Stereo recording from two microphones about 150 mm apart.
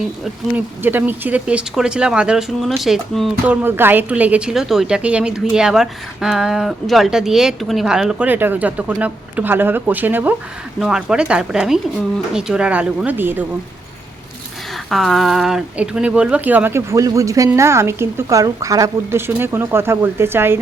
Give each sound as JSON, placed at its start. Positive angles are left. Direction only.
{"t": 0.5, "sound": "speech", "side_deg": -15}
{"t": 14.8, "sound": "speech", "side_deg": 0}